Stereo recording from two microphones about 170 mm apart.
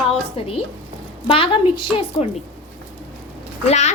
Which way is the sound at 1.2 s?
30° left (ahead or behind).